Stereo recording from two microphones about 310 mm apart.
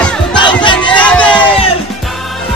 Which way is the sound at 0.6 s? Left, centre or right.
Centre.